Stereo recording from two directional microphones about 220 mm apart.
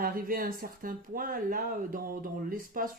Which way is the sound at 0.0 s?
40° right (ahead or behind).